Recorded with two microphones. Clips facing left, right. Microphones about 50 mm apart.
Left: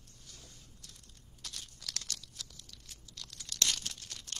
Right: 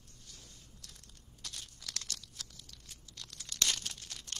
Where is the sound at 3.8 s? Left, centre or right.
Centre.